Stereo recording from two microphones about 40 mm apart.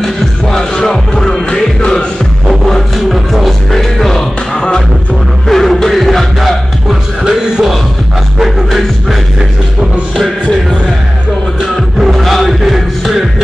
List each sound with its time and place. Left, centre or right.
0.0 s music: centre
3.1 s music: centre
4.6 s music: centre
5.5 s music: centre
7.2 s music: centre
12.0 s music: centre